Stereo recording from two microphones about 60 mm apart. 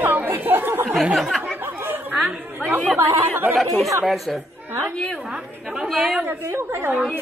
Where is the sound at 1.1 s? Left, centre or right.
Centre.